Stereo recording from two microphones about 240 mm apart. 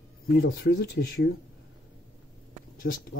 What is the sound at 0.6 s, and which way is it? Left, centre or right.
Speech, left.